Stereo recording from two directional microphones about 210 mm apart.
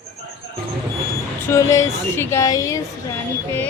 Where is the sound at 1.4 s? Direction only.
15° left (ahead or behind).